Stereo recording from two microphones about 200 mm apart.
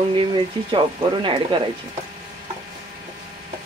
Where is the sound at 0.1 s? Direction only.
25° right (ahead or behind).